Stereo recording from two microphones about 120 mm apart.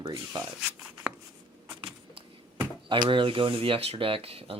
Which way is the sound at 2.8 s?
40° right (ahead or behind).